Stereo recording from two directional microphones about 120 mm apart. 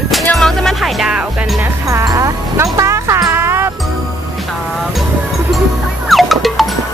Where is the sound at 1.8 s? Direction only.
30° right (ahead or behind).